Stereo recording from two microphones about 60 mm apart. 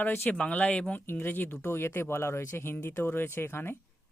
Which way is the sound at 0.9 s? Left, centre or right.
Left.